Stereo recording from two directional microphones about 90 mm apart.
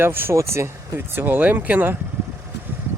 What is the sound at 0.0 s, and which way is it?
Speech, 25° right (ahead or behind).